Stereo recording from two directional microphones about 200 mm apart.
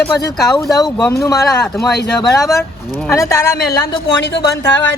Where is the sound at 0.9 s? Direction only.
15° left (ahead or behind).